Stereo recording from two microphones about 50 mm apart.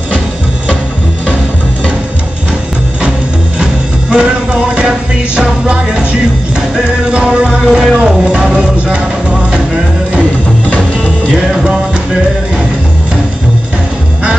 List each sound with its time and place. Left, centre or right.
4.1 s music: right
7.6 s music: centre
8.0 s music: centre
11.3 s music: centre